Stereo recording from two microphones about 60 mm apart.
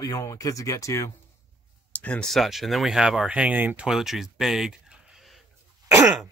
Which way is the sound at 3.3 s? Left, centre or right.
Right.